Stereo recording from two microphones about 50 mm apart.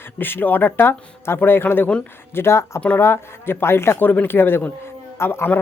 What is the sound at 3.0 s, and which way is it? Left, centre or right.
Speech, left.